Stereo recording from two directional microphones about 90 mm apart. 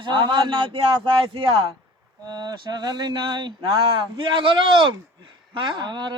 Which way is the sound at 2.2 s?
50° right (ahead or behind).